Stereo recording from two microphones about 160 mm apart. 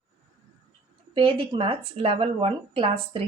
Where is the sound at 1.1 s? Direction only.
30° right (ahead or behind).